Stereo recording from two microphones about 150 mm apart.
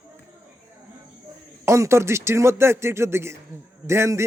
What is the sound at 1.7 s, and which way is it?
A man's voice, 20° right (ahead or behind).